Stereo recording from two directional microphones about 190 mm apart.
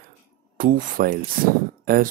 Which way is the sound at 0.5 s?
45° right (ahead or behind).